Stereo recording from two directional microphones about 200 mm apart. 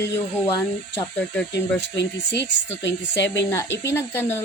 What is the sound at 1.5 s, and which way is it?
Speech, 60° left (ahead or behind).